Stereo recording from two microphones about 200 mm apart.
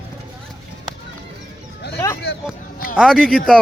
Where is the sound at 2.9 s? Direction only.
Centre (ahead or behind).